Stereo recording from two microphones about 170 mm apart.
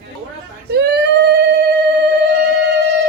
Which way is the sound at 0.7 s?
75° right (ahead or behind).